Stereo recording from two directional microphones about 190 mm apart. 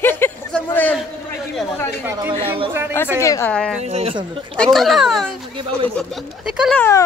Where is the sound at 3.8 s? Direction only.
35° right (ahead or behind).